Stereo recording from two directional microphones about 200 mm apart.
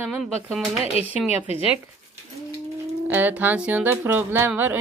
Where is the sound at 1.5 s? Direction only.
30° left (ahead or behind).